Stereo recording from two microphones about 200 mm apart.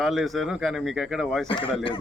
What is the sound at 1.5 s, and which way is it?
Speech, 25° left (ahead or behind).